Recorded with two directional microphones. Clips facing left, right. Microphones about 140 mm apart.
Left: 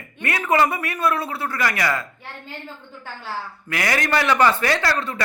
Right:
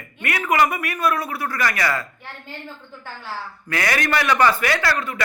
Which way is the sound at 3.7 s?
25° left (ahead or behind).